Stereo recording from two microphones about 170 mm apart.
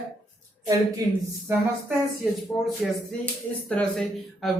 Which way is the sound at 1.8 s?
Centre (ahead or behind).